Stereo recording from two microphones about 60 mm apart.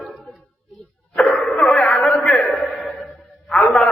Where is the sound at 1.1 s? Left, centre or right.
Centre.